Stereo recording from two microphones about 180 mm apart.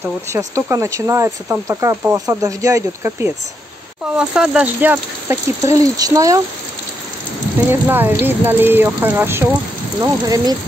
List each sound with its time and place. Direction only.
0.0 s speech: 15° right (ahead or behind)
7.7 s speech: 10° right (ahead or behind)